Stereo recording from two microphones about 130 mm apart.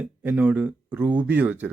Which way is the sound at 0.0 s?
10° right (ahead or behind).